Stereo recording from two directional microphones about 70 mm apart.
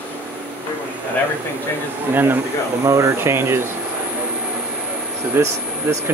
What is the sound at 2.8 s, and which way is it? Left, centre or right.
Speech, right.